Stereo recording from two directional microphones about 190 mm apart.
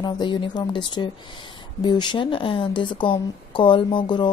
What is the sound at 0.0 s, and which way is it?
A woman's voice, 25° left (ahead or behind).